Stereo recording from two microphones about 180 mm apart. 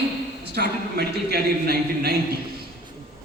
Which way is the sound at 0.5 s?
60° right (ahead or behind).